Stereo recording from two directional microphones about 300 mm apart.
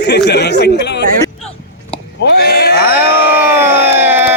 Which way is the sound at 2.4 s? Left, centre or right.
Left.